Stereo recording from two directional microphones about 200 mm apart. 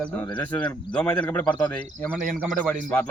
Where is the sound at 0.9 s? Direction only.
10° left (ahead or behind).